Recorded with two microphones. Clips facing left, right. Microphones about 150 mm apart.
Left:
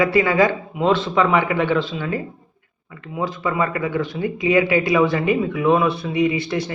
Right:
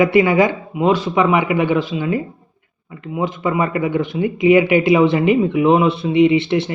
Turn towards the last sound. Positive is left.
turn(degrees=-25)  # may be behind; listen again after turning